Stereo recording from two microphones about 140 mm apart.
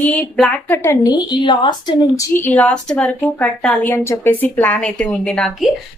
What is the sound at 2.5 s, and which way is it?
A woman's voice, 5° left (ahead or behind).